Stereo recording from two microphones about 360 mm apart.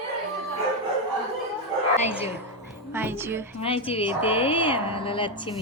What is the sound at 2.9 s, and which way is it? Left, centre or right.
Speech, centre.